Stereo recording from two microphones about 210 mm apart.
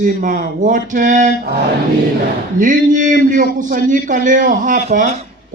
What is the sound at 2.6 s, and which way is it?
A man's voice, 40° right (ahead or behind).